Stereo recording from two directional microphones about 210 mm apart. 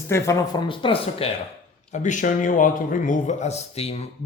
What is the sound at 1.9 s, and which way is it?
A man's voice, 35° left (ahead or behind).